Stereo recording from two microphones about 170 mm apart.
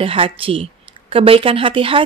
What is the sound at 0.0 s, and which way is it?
Speech, 30° right (ahead or behind).